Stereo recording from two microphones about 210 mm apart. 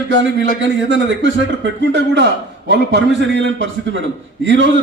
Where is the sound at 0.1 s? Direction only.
60° right (ahead or behind).